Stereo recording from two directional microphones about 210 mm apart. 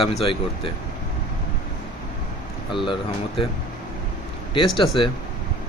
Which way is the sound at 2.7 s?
25° left (ahead or behind).